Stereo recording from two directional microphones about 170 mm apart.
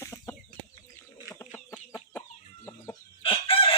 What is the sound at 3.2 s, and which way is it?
Chicken, 30° left (ahead or behind).